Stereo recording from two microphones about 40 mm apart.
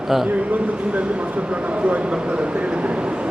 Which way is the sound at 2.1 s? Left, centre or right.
Right.